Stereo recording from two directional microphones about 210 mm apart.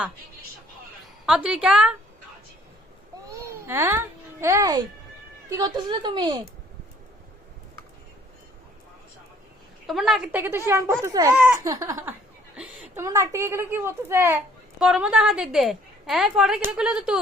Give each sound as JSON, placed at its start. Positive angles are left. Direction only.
{"t": 1.2, "sound": "a woman's voice", "side_deg": -5}
{"t": 3.2, "sound": "music", "side_deg": -10}
{"t": 5.5, "sound": "a woman's voice", "side_deg": -20}
{"t": 9.8, "sound": "a woman's voice", "side_deg": 0}
{"t": 10.7, "sound": "laughter", "side_deg": -10}
{"t": 11.3, "sound": "laughter", "side_deg": -5}
{"t": 12.5, "sound": "a woman's voice", "side_deg": -10}